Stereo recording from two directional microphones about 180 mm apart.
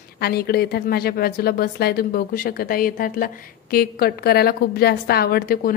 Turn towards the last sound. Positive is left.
turn(degrees=55)  # may be behind; listen again after turning